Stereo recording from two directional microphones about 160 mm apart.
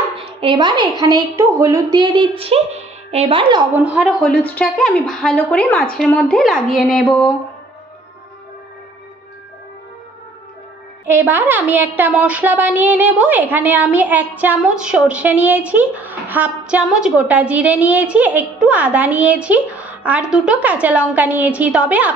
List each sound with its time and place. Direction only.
0.2 s a woman's voice: 35° right (ahead or behind)
3.7 s a woman's voice: 10° right (ahead or behind)
4.2 s a woman's voice: 10° left (ahead or behind)
11.1 s a woman's voice: 10° right (ahead or behind)